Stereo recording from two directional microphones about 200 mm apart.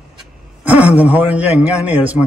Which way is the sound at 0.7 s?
5° right (ahead or behind).